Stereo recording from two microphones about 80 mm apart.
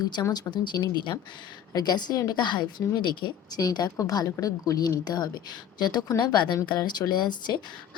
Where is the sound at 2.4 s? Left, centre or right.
Left.